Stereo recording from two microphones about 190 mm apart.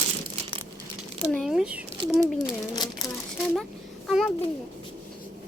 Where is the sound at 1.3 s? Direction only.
Centre (ahead or behind).